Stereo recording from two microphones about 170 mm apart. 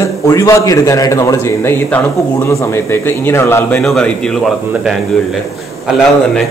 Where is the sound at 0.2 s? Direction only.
15° left (ahead or behind).